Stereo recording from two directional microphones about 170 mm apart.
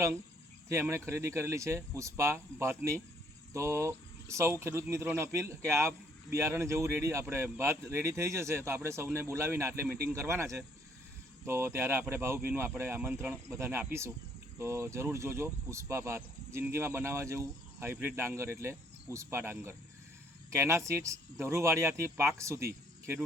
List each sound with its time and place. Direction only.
0.7 s speech: 15° right (ahead or behind)